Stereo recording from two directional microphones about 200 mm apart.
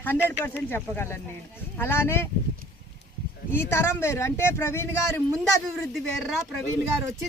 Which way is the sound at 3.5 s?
10° left (ahead or behind).